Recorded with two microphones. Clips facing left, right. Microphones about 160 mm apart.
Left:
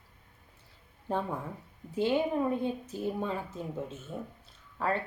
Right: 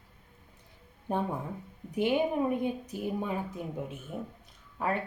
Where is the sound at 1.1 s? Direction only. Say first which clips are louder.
Right 1 dB; 15° right (ahead or behind).